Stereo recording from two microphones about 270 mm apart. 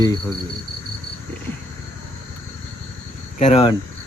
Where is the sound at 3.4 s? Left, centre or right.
Left.